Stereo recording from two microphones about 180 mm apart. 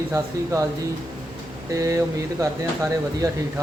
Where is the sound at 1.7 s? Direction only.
15° right (ahead or behind).